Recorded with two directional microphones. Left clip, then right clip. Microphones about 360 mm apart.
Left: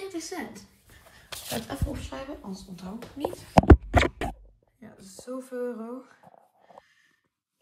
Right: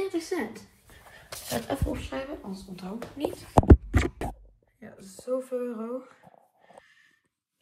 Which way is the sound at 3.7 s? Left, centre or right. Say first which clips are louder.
Left 3 dB; centre.